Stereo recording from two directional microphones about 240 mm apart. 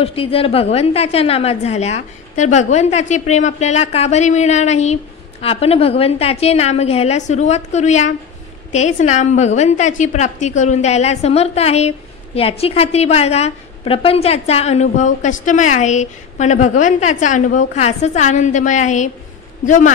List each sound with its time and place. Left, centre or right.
0.0 s a woman's voice: left